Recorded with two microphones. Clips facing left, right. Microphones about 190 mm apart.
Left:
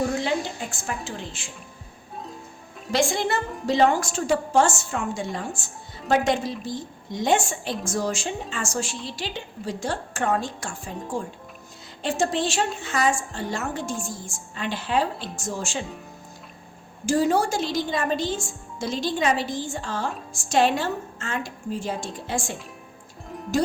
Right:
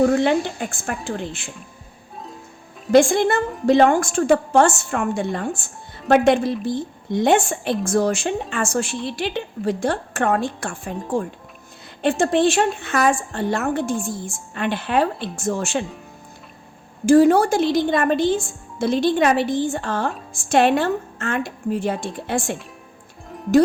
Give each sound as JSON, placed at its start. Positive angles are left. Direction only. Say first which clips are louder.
{"t": 0.0, "sound": "a woman's voice", "louder": "right 8 dB", "side_deg": -60}
{"t": 2.9, "sound": "a woman's voice", "louder": "right 9 dB", "side_deg": -55}
{"t": 12.0, "sound": "a woman's voice", "louder": "right 7 dB", "side_deg": -60}
{"t": 17.1, "sound": "a woman's voice", "louder": "right 8 dB", "side_deg": -55}